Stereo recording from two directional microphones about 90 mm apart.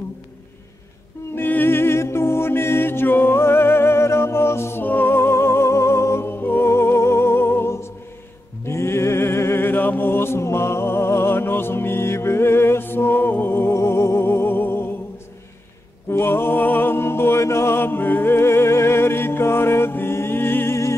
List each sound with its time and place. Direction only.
1.3 s music: 25° left (ahead or behind)
16.1 s music: 25° left (ahead or behind)